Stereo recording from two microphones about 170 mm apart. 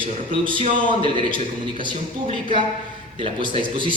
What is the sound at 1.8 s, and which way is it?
A man's voice, 30° right (ahead or behind).